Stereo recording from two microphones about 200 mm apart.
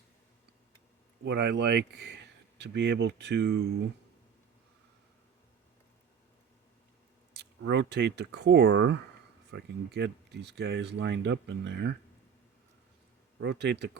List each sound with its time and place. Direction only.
1.2 s speech: 60° right (ahead or behind)
7.3 s speech: 60° right (ahead or behind)
13.4 s speech: 60° right (ahead or behind)